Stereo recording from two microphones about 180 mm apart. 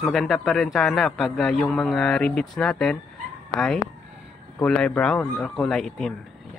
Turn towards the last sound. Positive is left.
turn(degrees=0)  # may be behind; listen again after turning